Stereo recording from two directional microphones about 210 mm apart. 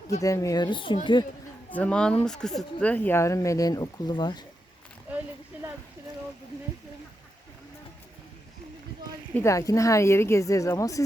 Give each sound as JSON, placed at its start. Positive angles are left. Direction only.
{"t": 0.2, "sound": "speech", "side_deg": 15}
{"t": 1.7, "sound": "speech", "side_deg": 5}
{"t": 5.1, "sound": "a sound", "side_deg": -10}
{"t": 9.3, "sound": "speech", "side_deg": 15}